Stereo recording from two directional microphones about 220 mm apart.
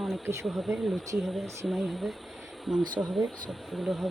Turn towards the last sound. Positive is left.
turn(degrees=0)  # may be behind; listen again after turning